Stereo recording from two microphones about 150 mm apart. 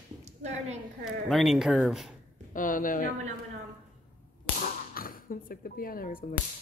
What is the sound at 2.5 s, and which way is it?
Speech, 65° left (ahead or behind).